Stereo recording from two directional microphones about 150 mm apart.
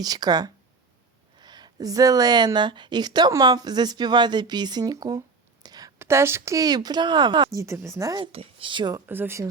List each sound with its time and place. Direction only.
0.0 s a woman's voice: 25° right (ahead or behind)
8.2 s speech: 40° right (ahead or behind)
9.0 s speech: 15° right (ahead or behind)